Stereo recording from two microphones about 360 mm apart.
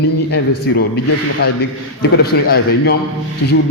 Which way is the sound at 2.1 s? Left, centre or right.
Left.